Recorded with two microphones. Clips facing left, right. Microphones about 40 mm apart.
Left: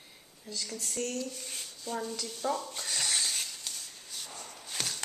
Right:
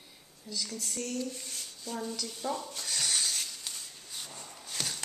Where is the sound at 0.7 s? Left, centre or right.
Centre.